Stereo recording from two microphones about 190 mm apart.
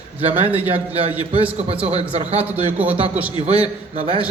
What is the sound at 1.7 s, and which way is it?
A man's voice, 30° right (ahead or behind).